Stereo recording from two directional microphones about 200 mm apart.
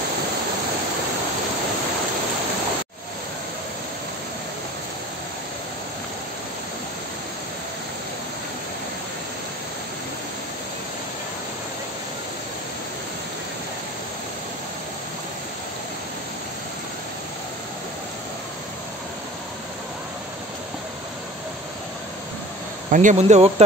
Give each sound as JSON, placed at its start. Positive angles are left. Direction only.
{"t": 22.8, "sound": "speech", "side_deg": -40}